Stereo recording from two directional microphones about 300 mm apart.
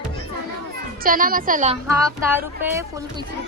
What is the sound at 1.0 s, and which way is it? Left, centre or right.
Speech, right.